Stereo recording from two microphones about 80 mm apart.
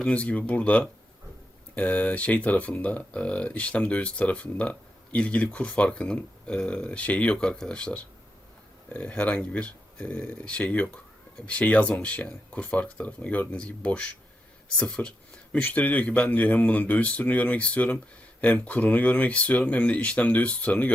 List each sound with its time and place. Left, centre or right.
0.1 s speech: centre